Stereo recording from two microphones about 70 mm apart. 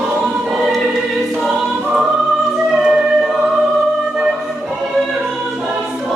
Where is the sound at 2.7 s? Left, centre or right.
Centre.